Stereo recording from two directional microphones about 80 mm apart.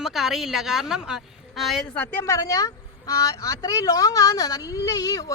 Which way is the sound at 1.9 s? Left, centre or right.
Left.